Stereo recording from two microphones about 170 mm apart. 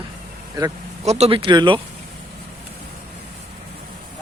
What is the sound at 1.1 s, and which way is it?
Speech, 40° right (ahead or behind).